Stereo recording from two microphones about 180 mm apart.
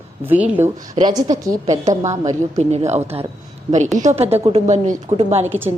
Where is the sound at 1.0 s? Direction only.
20° right (ahead or behind).